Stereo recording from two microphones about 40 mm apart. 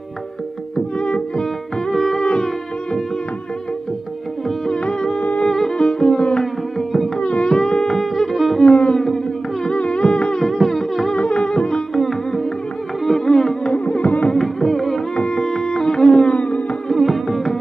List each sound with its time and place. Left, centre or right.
0.7 s music: left
1.9 s music: centre
4.6 s music: centre
7.2 s music: left
7.5 s a sound: centre
8.3 s music: centre
8.5 s music: left
10.4 s music: centre
11.1 s music: left
11.9 s music: centre
13.8 s music: left
14.3 s music: centre
15.1 s music: left
16.9 s music: centre